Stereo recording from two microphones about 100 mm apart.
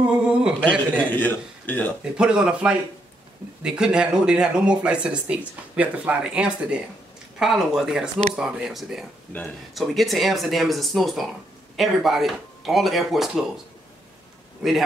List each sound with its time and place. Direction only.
0.0 s a sound: 10° right (ahead or behind)
0.7 s a man's voice: 15° left (ahead or behind)
2.1 s speech: 10° right (ahead or behind)
14.6 s speech: 5° right (ahead or behind)